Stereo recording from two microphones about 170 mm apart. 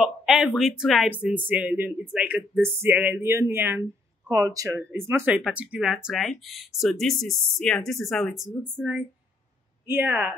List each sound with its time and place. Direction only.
0.0 s speech: 5° right (ahead or behind)
9.8 s speech: 10° right (ahead or behind)